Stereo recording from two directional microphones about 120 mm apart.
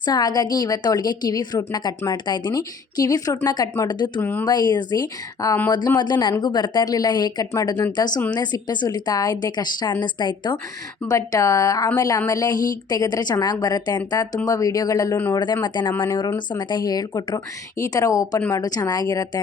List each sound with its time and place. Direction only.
0.0 s a woman's voice: 30° left (ahead or behind)
4.2 s speech: 15° left (ahead or behind)
4.4 s a woman's voice: 35° left (ahead or behind)
11.1 s a woman's voice: 30° left (ahead or behind)